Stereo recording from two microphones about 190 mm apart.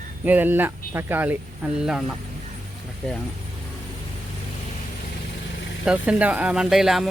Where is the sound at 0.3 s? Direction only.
10° right (ahead or behind).